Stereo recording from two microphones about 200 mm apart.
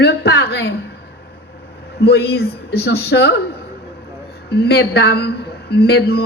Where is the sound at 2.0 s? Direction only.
55° left (ahead or behind).